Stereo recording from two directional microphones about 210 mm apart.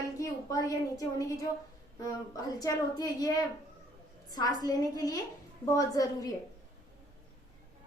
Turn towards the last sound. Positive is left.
turn(degrees=15)  # may be behind; listen again after turning